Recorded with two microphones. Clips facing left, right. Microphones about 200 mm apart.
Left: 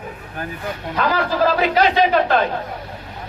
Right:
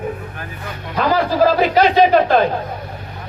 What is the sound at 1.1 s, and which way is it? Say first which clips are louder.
Speech: right 5 dB; 40° right (ahead or behind).